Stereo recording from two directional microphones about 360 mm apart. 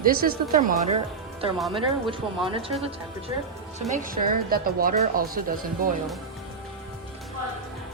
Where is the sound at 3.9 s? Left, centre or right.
Right.